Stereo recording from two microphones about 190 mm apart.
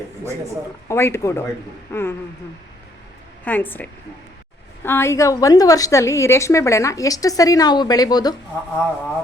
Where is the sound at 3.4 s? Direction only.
10° left (ahead or behind).